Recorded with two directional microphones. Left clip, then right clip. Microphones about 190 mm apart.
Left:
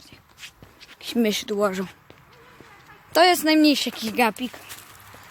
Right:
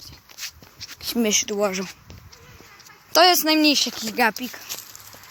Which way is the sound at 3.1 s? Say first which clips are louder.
Right 1 dB; centre (ahead or behind).